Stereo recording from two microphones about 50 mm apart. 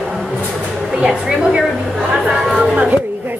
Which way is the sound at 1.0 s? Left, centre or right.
Centre.